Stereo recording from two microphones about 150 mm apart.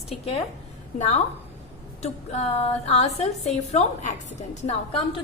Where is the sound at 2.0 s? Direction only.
45° left (ahead or behind).